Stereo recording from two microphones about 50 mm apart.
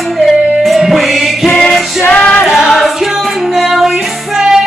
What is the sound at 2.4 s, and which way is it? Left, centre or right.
Music, centre.